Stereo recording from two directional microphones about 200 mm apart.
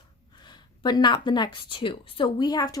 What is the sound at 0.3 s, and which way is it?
A woman's voice, 20° left (ahead or behind).